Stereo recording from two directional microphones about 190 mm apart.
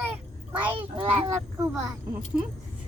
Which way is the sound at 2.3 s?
5° right (ahead or behind).